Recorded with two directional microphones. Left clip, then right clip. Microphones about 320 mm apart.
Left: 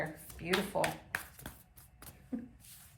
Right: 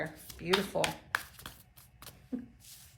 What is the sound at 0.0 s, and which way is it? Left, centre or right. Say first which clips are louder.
Speech: right 1 dB; centre.